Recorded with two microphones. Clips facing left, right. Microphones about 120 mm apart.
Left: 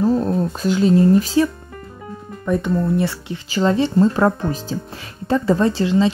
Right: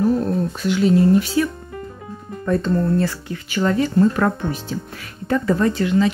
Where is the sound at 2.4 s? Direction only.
15° left (ahead or behind).